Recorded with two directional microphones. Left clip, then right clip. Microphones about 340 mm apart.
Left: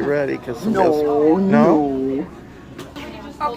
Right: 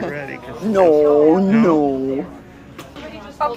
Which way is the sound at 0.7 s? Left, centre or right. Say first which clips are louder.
Right 4 dB; right.